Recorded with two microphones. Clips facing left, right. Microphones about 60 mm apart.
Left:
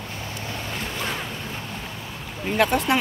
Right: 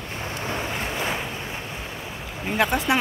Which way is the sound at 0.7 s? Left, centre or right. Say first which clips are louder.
Right 2 dB; centre.